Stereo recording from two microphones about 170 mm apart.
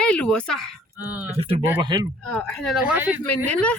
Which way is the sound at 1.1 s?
10° right (ahead or behind).